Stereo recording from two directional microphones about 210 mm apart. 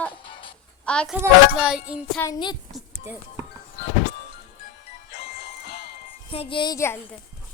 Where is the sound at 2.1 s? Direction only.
15° left (ahead or behind).